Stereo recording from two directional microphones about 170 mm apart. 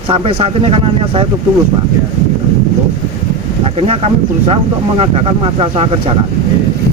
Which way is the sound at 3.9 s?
35° right (ahead or behind).